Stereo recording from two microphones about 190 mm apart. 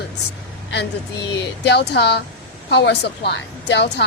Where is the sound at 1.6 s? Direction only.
60° left (ahead or behind).